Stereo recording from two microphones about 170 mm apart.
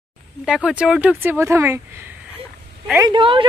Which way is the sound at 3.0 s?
30° right (ahead or behind).